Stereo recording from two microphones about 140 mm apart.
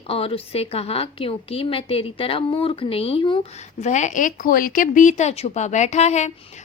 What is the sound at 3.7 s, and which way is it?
A woman's voice, 60° left (ahead or behind).